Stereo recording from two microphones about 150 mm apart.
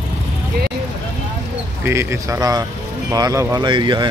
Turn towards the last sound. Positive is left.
turn(degrees=-30)  # may be behind; listen again after turning